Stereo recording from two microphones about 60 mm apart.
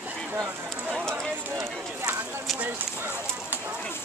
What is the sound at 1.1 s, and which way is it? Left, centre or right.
Clip-clop, right.